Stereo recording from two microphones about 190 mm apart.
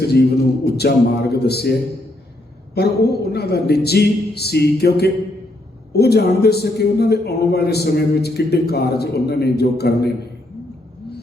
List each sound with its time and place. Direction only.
0.6 s a man's voice: 55° left (ahead or behind)
2.7 s a man's voice: 55° left (ahead or behind)